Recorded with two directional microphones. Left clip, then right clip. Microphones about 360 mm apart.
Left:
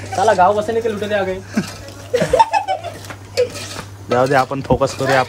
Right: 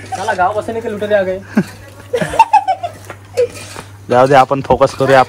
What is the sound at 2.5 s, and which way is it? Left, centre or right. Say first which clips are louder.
Laughter: right 7 dB; centre.